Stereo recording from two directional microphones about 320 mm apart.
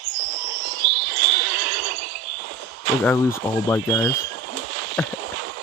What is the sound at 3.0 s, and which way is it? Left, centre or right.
Speech, centre.